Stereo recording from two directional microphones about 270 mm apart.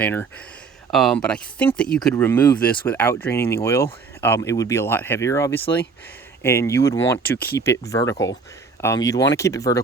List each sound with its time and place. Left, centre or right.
0.0 s speech: centre